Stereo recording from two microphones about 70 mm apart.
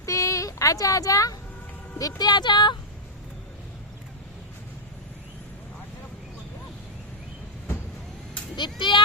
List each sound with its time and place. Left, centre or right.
0.0 s a sound: left
2.0 s speech: left
8.5 s speech: left